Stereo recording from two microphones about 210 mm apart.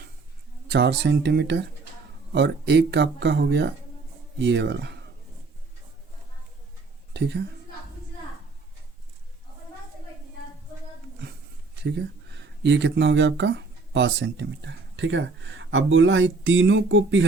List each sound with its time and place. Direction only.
0.7 s speech: 55° right (ahead or behind)
7.1 s a woman's voice: 55° right (ahead or behind)
11.8 s speech: 55° right (ahead or behind)